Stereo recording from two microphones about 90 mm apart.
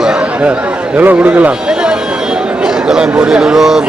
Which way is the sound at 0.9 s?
15° right (ahead or behind).